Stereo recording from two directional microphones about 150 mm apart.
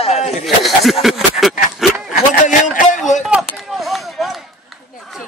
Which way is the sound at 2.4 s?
60° left (ahead or behind).